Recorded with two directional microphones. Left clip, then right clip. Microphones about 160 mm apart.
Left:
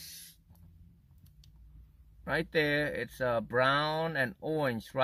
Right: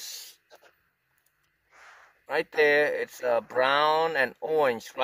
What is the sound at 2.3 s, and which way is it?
Speech, 15° right (ahead or behind).